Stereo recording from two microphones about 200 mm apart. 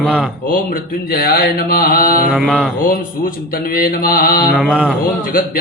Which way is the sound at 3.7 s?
45° left (ahead or behind).